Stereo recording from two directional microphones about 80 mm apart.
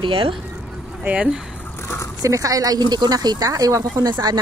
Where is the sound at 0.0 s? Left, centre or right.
Right.